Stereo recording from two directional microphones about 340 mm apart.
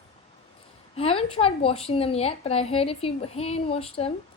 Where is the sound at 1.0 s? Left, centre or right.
Centre.